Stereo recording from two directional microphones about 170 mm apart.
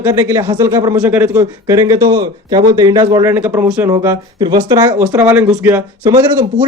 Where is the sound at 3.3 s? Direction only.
10° right (ahead or behind).